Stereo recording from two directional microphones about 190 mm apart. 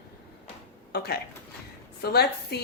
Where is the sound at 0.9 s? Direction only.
55° left (ahead or behind).